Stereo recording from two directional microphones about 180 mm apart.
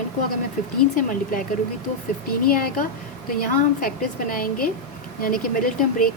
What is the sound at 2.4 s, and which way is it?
Speech, 55° left (ahead or behind).